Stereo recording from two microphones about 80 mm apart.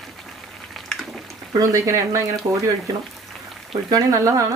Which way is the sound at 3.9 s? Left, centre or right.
Right.